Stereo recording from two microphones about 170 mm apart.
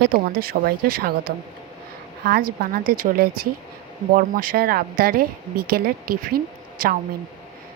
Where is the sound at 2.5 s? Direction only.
60° right (ahead or behind).